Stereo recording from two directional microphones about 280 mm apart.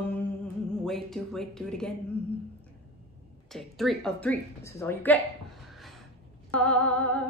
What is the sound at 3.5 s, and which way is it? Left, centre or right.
Speech, centre.